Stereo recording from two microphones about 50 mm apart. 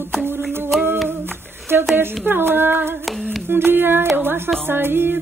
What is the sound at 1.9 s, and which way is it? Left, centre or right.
Female singing, right.